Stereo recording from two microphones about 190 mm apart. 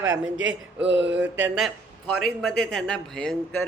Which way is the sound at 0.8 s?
70° right (ahead or behind).